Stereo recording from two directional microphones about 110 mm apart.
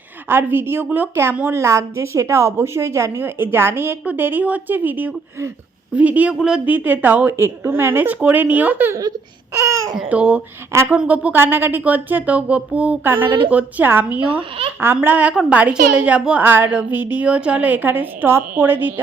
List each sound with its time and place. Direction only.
0.3 s a woman's voice: 20° right (ahead or behind)
9.6 s babbling: 25° right (ahead or behind)
10.1 s a woman's voice: 15° right (ahead or behind)